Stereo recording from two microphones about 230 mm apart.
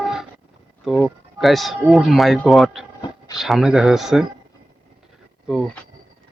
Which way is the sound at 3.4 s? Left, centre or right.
Centre.